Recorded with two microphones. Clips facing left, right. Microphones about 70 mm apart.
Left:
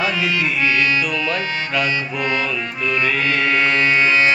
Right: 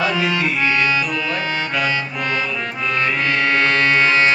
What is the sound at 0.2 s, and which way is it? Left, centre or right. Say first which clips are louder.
Music: right 1 dB; right.